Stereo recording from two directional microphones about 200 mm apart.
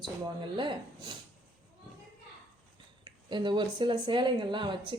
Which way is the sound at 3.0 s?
20° right (ahead or behind).